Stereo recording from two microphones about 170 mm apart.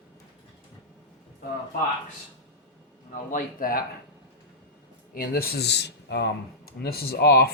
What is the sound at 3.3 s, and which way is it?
Speech, 55° left (ahead or behind).